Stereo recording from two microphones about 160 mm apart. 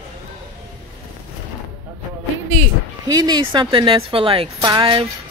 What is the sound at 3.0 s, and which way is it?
Speech, 25° right (ahead or behind).